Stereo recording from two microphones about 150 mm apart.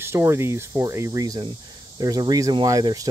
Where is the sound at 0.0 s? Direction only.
15° right (ahead or behind).